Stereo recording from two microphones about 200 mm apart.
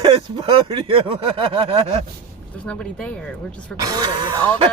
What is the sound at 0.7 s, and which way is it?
Speech, 25° right (ahead or behind).